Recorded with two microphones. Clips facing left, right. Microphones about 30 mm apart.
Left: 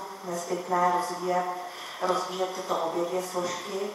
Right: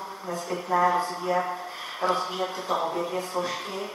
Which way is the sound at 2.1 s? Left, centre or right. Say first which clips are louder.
Right 1 dB; right.